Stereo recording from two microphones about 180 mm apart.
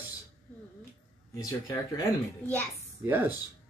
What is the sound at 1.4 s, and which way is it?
Speech, 20° left (ahead or behind).